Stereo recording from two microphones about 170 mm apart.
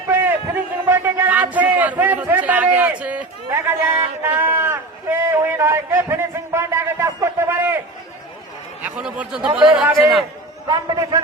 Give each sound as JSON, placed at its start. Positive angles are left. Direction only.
{"t": 0.1, "sound": "a sound", "side_deg": -10}
{"t": 9.0, "sound": "speech", "side_deg": -5}
{"t": 10.7, "sound": "a man's voice", "side_deg": -25}